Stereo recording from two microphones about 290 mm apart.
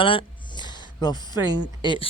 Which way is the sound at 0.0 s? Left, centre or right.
Centre.